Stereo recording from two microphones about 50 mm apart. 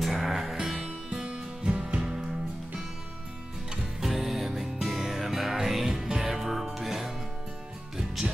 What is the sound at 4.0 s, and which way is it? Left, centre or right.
Music, centre.